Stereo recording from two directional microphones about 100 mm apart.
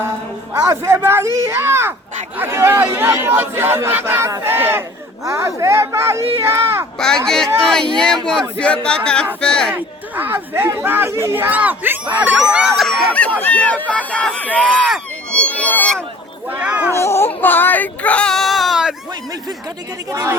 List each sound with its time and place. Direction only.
0.5 s speech: 30° right (ahead or behind)
7.3 s speech: 5° left (ahead or behind)
9.7 s speech: 20° right (ahead or behind)
12.7 s speech: centre (ahead or behind)
13.4 s speech: 15° left (ahead or behind)
15.3 s a sound: 10° left (ahead or behind)
16.5 s speech: 15° right (ahead or behind)
16.9 s speech: 25° left (ahead or behind); by 18.9 s 5° right (ahead or behind)